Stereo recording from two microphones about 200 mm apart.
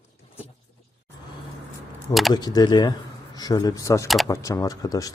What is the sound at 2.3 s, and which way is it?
A man's voice, 20° left (ahead or behind).